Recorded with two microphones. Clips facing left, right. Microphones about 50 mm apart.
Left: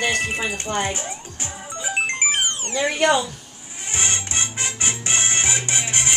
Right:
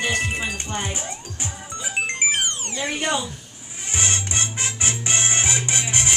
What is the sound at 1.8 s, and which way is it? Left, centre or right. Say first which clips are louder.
Music: left 1 dB; centre.